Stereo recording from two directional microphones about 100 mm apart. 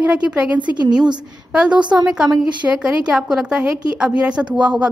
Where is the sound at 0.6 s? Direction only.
45° right (ahead or behind).